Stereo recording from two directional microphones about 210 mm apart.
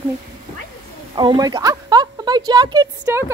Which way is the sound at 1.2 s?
20° right (ahead or behind).